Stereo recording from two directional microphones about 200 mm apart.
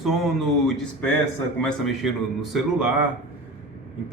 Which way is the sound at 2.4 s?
Centre (ahead or behind).